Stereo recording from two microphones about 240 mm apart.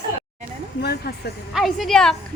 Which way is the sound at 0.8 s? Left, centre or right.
Left.